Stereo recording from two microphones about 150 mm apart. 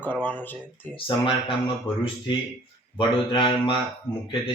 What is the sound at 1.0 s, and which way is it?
Speech, 35° left (ahead or behind).